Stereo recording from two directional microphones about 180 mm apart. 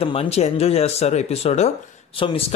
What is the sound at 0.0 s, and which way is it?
Speech, 35° left (ahead or behind).